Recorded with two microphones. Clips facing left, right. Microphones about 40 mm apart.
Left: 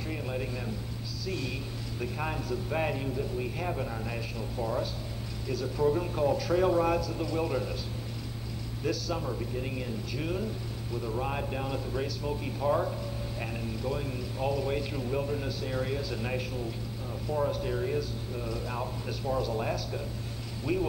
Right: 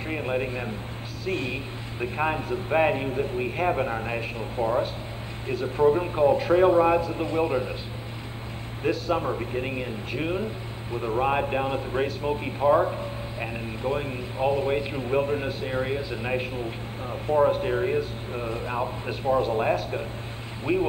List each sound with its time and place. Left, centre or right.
0.1 s a man's voice: right
8.8 s a man's voice: right